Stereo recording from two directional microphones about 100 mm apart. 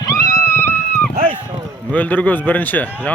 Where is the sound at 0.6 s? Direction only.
20° left (ahead or behind).